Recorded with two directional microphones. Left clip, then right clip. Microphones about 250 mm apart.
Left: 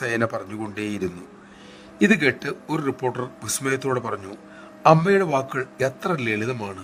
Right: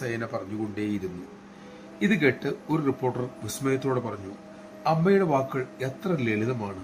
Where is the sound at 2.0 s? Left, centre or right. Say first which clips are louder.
Left 5 dB; left.